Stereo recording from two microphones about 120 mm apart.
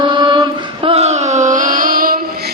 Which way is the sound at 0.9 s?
65° right (ahead or behind).